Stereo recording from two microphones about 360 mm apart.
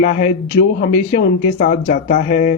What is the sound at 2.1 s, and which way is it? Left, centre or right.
Speech, left.